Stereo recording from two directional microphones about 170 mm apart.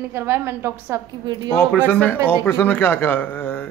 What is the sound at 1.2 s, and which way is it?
Speech, 25° right (ahead or behind).